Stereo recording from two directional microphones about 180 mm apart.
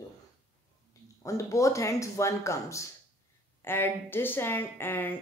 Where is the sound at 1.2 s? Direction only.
15° left (ahead or behind).